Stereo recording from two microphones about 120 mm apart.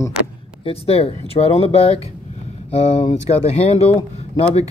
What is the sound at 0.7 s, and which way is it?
Speech, 55° left (ahead or behind).